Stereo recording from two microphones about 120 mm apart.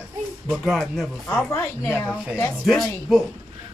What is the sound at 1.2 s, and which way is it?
Speech, 25° left (ahead or behind).